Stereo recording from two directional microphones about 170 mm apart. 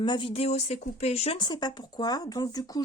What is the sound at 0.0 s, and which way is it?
Speech, 30° left (ahead or behind).